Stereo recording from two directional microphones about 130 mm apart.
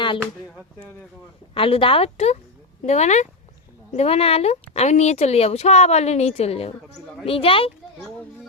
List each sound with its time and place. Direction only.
1.5 s a woman's voice: 45° left (ahead or behind); by 3.2 s 60° left (ahead or behind)
3.9 s a woman's voice: 50° left (ahead or behind)